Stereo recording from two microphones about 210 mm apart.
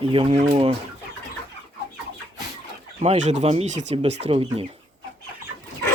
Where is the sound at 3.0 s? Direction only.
35° right (ahead or behind).